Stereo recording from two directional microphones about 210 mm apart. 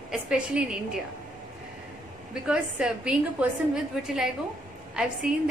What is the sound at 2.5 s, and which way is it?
A woman's voice, 5° right (ahead or behind).